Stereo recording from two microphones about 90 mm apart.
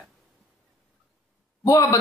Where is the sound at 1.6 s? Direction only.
40° left (ahead or behind).